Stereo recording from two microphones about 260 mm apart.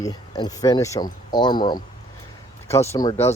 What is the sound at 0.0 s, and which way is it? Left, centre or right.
Speech, centre.